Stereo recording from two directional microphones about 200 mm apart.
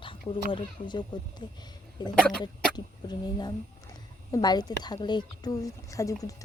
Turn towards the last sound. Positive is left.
turn(degrees=15)  # may be behind; listen again after turning